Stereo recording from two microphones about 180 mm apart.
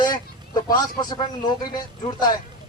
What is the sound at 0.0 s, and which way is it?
Speech, 25° left (ahead or behind).